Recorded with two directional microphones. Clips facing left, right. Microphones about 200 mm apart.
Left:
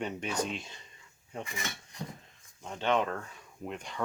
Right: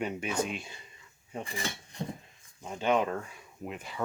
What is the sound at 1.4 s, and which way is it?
Cutlery, 30° right (ahead or behind).